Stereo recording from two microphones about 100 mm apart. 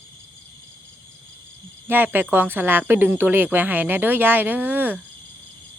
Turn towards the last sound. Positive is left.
turn(degrees=-15)  # may be behind; listen again after turning